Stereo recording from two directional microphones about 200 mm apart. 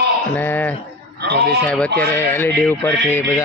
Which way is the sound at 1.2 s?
55° right (ahead or behind).